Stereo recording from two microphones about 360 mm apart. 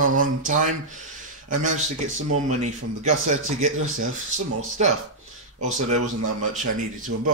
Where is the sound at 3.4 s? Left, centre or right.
Right.